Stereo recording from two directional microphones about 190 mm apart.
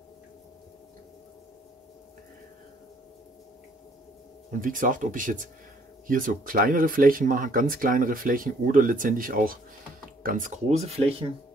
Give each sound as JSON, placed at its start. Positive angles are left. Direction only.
{"t": 4.5, "sound": "speech", "side_deg": -45}